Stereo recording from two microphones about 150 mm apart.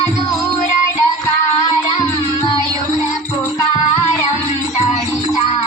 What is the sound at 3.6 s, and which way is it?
Music, 20° left (ahead or behind).